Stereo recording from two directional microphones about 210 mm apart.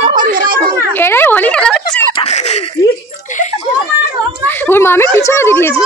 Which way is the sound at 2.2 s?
30° left (ahead or behind).